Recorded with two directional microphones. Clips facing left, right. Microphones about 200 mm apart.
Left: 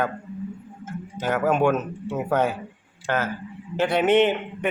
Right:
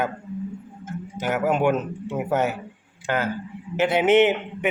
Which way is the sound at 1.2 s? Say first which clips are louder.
Even; 15° right (ahead or behind).